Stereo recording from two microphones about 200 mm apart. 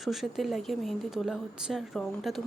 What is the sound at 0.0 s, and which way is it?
Speech, centre (ahead or behind).